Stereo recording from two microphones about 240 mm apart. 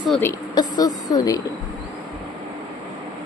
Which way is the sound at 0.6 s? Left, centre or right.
Centre.